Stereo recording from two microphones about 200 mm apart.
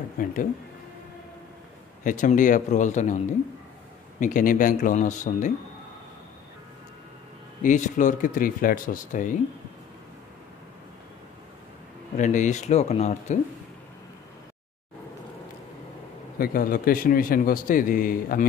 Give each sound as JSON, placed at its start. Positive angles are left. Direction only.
{"t": 0.2, "sound": "a man's voice", "side_deg": 45}
{"t": 2.0, "sound": "speech", "side_deg": 40}
{"t": 4.2, "sound": "speech", "side_deg": 40}
{"t": 7.6, "sound": "speech", "side_deg": 40}
{"t": 12.2, "sound": "speech", "side_deg": 40}
{"t": 16.3, "sound": "a man's voice", "side_deg": 45}